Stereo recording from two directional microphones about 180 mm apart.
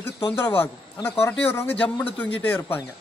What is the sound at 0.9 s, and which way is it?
Speech, 15° left (ahead or behind).